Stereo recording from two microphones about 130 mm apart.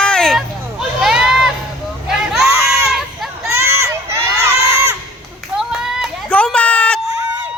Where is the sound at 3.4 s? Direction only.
20° right (ahead or behind).